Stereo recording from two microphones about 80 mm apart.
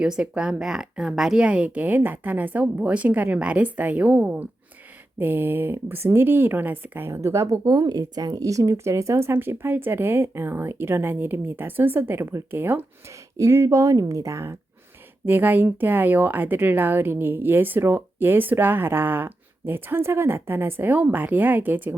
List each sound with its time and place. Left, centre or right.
0.0 s speech: centre
7.1 s speech: right
13.3 s speech: right
15.3 s speech: right